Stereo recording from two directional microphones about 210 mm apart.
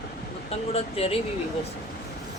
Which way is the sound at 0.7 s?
30° left (ahead or behind).